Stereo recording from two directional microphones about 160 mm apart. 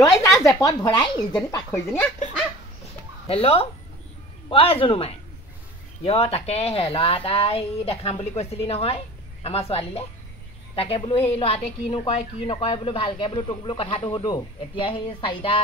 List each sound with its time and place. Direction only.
0.2 s speech: 20° left (ahead or behind)
3.3 s speech: 40° left (ahead or behind)